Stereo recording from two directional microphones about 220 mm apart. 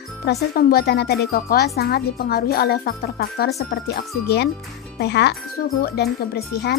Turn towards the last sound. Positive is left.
turn(degrees=45)  # may be behind; listen again after turning